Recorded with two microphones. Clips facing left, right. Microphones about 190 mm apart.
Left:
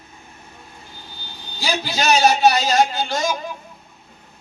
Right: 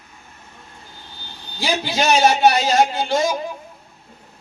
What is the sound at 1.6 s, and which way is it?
A man's voice, 25° right (ahead or behind).